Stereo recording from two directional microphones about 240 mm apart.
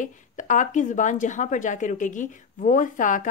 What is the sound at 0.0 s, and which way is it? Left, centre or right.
A woman's voice, left.